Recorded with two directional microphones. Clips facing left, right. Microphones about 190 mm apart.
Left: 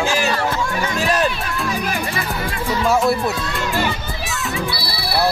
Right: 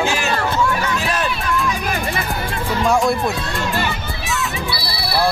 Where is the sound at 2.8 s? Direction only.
5° left (ahead or behind).